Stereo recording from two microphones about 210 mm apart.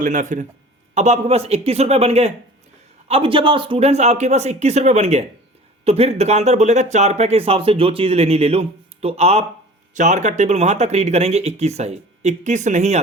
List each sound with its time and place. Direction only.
0.0 s speech: 40° right (ahead or behind)